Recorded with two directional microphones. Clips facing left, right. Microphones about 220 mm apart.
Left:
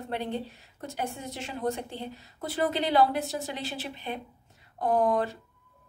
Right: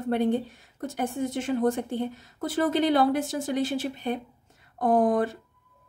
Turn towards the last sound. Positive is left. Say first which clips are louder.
# right 3 dB
turn(degrees=-50)  # may be behind; listen again after turning